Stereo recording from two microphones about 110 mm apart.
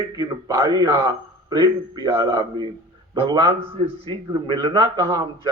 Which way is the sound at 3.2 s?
55° right (ahead or behind).